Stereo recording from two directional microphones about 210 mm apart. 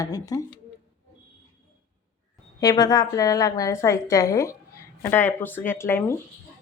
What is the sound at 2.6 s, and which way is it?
A woman's voice, 20° left (ahead or behind).